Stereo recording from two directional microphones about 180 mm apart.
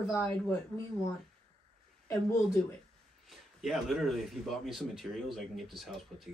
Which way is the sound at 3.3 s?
Centre (ahead or behind).